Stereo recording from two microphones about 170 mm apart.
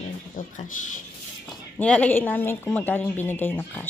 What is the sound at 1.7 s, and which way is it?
A woman's voice, 5° left (ahead or behind).